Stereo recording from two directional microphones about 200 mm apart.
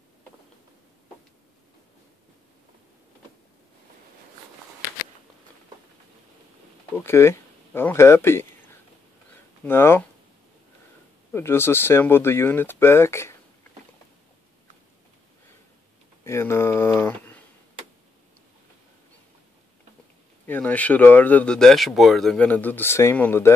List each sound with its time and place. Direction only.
7.0 s speech: 15° left (ahead or behind)
9.7 s speech: 10° left (ahead or behind)
11.3 s speech: 10° left (ahead or behind)
16.3 s a sound: 15° left (ahead or behind)
20.4 s speech: 10° left (ahead or behind)